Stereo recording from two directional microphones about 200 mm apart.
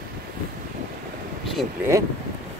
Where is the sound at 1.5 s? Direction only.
Centre (ahead or behind).